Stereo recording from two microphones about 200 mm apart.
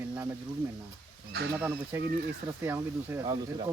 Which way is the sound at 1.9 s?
10° right (ahead or behind).